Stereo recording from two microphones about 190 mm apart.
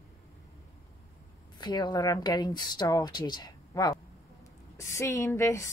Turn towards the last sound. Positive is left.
turn(degrees=15)  # may be behind; listen again after turning